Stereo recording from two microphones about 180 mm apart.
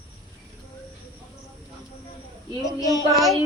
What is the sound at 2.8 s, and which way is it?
Child singing, 20° left (ahead or behind).